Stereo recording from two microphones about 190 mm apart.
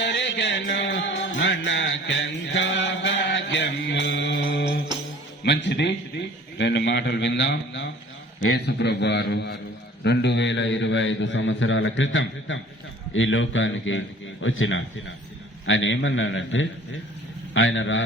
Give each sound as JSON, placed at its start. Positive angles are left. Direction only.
{"t": 0.0, "sound": "music", "side_deg": 65}
{"t": 5.5, "sound": "a man's voice", "side_deg": 65}